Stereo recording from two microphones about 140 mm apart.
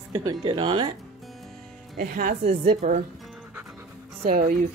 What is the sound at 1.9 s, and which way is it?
Speech, 85° right.